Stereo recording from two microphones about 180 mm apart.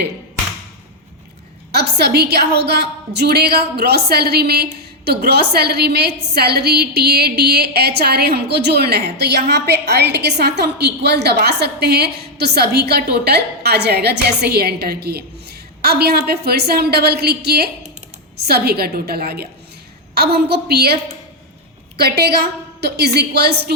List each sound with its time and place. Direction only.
1.7 s a woman's voice: 65° right (ahead or behind)